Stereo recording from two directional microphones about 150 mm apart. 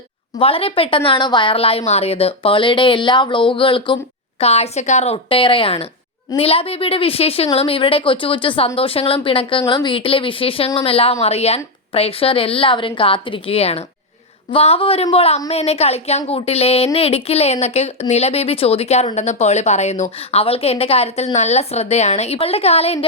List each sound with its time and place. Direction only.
0.3 s a woman's voice: 40° left (ahead or behind)